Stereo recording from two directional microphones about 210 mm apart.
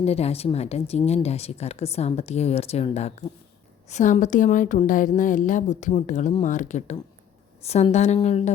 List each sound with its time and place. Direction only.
0.0 s speech: 30° left (ahead or behind)